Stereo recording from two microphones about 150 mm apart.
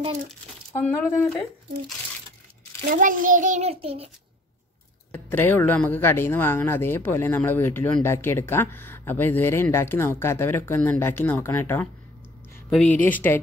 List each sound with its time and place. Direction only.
0.7 s speech: 10° left (ahead or behind)
2.9 s a child's voice: 65° right (ahead or behind); by 4.1 s 40° right (ahead or behind)
5.1 s speech: 15° left (ahead or behind)